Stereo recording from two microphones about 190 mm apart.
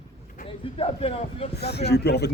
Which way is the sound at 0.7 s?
30° left (ahead or behind).